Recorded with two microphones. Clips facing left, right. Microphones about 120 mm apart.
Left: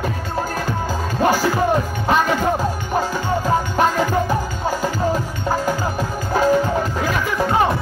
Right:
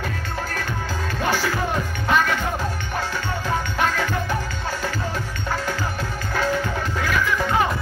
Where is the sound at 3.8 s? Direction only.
35° left (ahead or behind).